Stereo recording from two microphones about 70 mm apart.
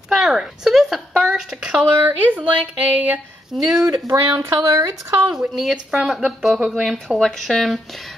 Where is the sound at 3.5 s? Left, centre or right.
Centre.